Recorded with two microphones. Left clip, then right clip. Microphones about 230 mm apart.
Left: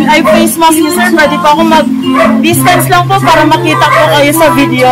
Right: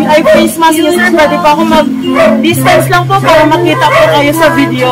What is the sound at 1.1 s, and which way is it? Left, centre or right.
Speech, left.